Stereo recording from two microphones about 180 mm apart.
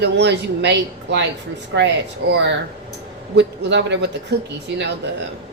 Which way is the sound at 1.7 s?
90° right.